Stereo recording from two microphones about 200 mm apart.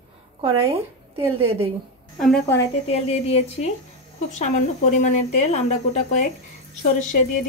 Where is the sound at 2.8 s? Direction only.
30° left (ahead or behind).